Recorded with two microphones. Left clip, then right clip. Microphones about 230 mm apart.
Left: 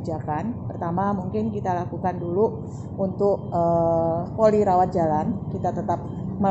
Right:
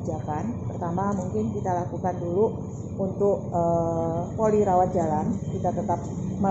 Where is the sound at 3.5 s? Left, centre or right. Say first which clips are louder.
Left 3 dB; left.